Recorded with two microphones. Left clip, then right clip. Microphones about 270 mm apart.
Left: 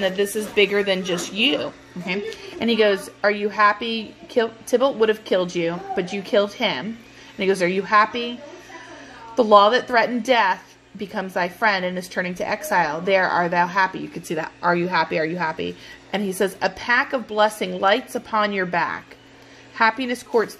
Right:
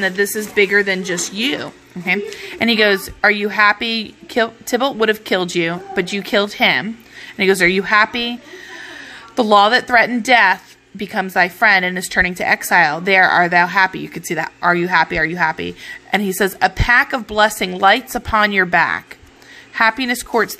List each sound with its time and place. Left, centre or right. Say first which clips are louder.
0.0 s speech: right 4 dB; right
9.4 s speech: right 2 dB; right